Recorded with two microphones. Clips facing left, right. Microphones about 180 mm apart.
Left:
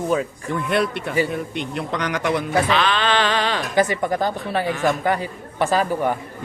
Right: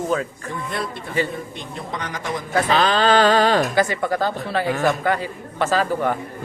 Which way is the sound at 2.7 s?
40° right (ahead or behind).